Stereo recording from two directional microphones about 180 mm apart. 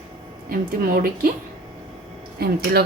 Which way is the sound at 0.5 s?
50° right (ahead or behind).